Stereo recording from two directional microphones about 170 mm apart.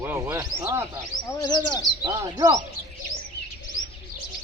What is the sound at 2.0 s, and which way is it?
Speech, 20° right (ahead or behind).